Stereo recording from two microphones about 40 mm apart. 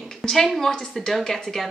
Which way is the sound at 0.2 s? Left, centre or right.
Centre.